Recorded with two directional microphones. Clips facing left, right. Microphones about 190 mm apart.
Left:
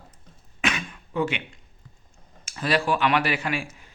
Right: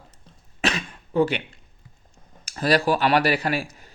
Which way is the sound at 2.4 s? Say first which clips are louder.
Right 4 dB; 40° right (ahead or behind).